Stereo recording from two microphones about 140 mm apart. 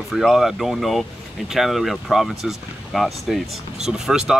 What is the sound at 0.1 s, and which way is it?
Speech, centre (ahead or behind).